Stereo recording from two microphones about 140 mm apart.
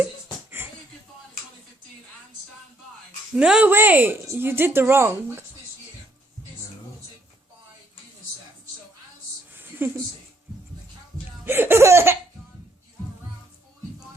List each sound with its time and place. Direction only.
3.3 s speech: 5° right (ahead or behind)
9.6 s a sound: 15° right (ahead or behind)
11.4 s speech: 15° right (ahead or behind)